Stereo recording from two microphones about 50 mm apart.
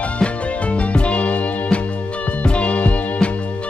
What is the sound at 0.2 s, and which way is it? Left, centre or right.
Music, left.